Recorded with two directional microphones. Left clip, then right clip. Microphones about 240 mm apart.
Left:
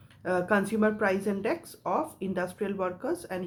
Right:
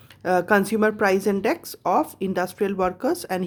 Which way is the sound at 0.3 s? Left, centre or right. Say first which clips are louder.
Right 7 dB; right.